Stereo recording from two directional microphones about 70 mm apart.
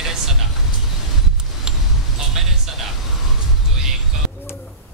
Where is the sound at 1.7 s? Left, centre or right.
Centre.